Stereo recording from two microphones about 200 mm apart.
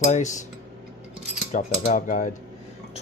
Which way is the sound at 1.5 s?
40° left (ahead or behind).